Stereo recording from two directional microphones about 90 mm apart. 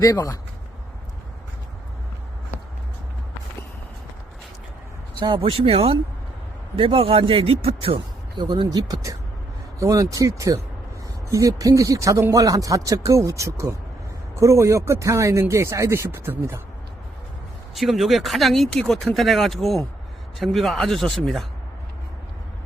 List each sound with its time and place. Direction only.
0.0 s a man's voice: 40° left (ahead or behind)
5.2 s speech: 75° right (ahead or behind); by 8.0 s 90° right
8.4 s speech: 55° right (ahead or behind); by 16.6 s 25° right (ahead or behind)
17.7 s speech: centre (ahead or behind)